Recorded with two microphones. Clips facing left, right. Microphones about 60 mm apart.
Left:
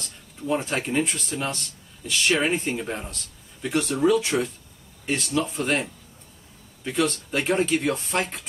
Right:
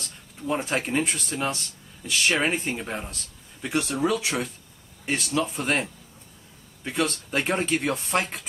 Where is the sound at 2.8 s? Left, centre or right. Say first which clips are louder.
Left 1 dB; centre.